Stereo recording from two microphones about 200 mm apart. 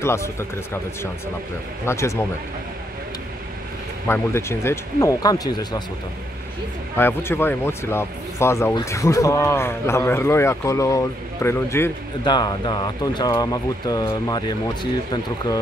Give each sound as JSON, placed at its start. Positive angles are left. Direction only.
{"t": 0.0, "sound": "speech", "side_deg": 15}
{"t": 1.9, "sound": "speech", "side_deg": 15}
{"t": 4.1, "sound": "speech", "side_deg": 15}
{"t": 7.0, "sound": "speech", "side_deg": 10}